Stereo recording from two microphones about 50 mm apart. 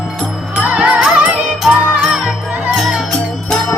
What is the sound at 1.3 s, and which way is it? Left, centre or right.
Music, centre.